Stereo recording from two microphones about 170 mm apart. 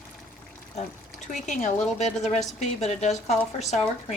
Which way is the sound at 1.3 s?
45° left (ahead or behind).